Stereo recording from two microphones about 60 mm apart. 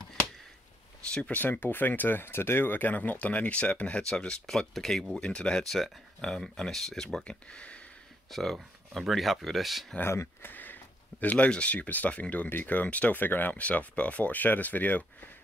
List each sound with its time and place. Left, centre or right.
1.1 s speech: left; by 5.0 s centre
5.2 s speech: centre
7.2 s speech: centre
8.3 s speech: centre
10.4 s speech: left